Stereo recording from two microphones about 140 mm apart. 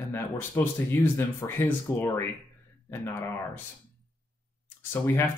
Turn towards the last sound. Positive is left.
turn(degrees=15)  # may be behind; listen again after turning